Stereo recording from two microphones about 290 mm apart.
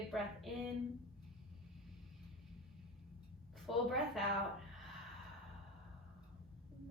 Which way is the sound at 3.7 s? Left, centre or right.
Centre.